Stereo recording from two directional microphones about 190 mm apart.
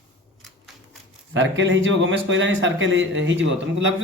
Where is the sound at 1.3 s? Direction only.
90° right.